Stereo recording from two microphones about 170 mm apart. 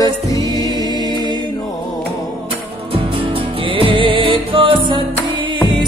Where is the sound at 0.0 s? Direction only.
20° left (ahead or behind).